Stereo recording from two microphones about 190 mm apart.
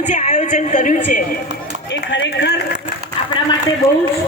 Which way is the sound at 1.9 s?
70° left (ahead or behind).